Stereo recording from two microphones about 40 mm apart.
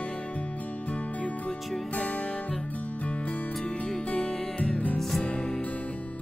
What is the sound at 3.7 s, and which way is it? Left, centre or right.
Music, left.